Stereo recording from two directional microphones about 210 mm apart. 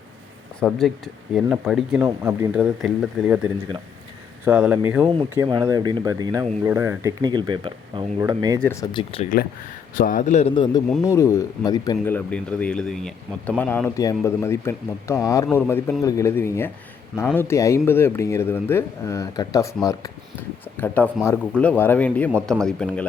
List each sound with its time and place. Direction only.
0.6 s speech: centre (ahead or behind)
2.0 s speech: 10° right (ahead or behind)
8.6 s speech: 15° left (ahead or behind)
10.0 s a man's voice: 40° left (ahead or behind); by 12.1 s 20° left (ahead or behind)
12.1 s speech: 5° left (ahead or behind)